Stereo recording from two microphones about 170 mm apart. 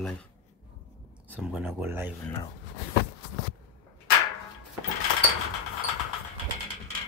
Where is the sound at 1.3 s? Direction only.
10° right (ahead or behind).